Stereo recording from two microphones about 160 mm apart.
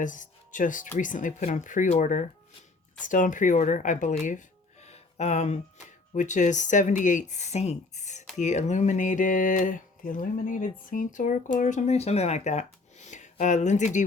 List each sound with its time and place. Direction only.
0.0 s speech: 55° left (ahead or behind)